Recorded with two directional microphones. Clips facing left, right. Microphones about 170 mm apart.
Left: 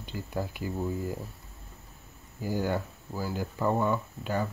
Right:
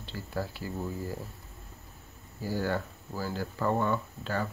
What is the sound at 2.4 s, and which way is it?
Speech, 15° left (ahead or behind).